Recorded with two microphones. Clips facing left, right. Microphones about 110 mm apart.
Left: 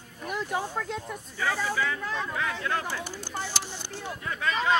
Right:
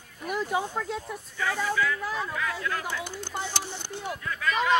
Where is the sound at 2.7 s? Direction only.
40° left (ahead or behind).